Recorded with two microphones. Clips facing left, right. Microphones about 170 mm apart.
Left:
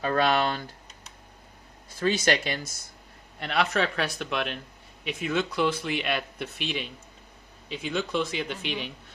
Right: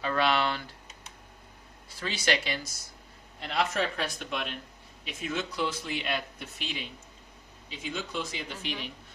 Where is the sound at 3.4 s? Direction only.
70° left (ahead or behind).